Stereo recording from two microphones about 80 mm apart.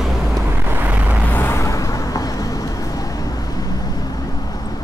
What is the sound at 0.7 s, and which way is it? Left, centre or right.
Vehicle, right.